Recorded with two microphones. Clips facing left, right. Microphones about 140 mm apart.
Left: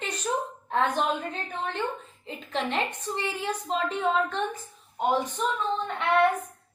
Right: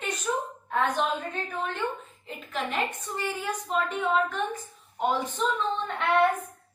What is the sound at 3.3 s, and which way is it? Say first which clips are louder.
A woman's voice: right 1 dB; 25° left (ahead or behind).